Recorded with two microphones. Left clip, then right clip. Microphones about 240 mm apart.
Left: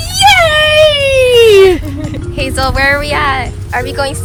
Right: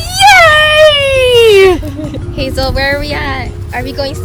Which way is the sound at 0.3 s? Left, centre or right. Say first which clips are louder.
Right 3 dB; centre.